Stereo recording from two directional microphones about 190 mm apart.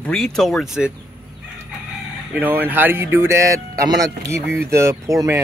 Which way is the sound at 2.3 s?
10° right (ahead or behind).